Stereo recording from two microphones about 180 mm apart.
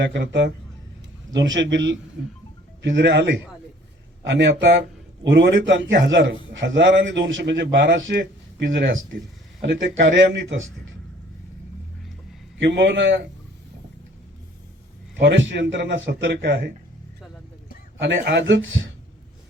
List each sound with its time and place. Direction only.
0.0 s a man's voice: 80° right
1.3 s a man's voice: 90° right; by 9.7 s 70° right (ahead or behind)
10.0 s speech: 90° right
12.5 s a man's voice: 80° right
15.1 s a man's voice: 85° right
18.0 s speech: 85° right